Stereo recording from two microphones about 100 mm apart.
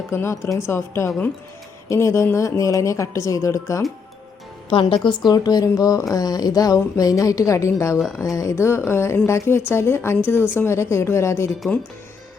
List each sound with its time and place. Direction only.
0.1 s speech: 25° left (ahead or behind)
4.7 s a woman's voice: 55° left (ahead or behind); by 11.5 s 30° left (ahead or behind)